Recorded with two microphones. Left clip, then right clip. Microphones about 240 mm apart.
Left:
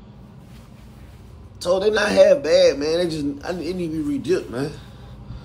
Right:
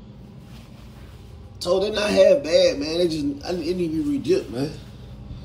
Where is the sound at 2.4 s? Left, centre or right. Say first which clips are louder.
Left 3 dB; left.